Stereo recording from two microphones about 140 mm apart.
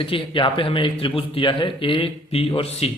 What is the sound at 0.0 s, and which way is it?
Speech, 40° left (ahead or behind).